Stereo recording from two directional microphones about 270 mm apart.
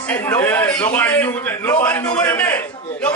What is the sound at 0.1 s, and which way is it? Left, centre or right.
A man's voice, centre.